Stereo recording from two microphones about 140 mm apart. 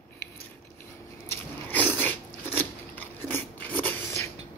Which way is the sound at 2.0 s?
15° left (ahead or behind).